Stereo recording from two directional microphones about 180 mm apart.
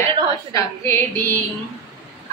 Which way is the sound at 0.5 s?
15° left (ahead or behind).